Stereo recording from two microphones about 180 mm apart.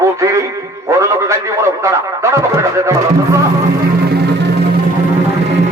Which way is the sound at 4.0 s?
65° right (ahead or behind).